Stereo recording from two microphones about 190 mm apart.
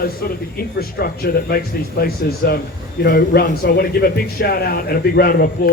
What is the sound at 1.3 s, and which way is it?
Speech, 50° left (ahead or behind).